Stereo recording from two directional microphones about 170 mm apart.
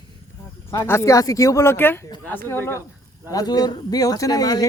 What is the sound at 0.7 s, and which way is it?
Speech, 15° left (ahead or behind).